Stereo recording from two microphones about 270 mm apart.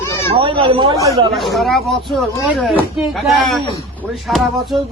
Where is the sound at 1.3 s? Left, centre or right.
Centre.